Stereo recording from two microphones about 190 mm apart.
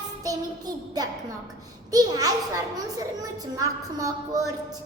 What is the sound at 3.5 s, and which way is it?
Speech, 20° right (ahead or behind).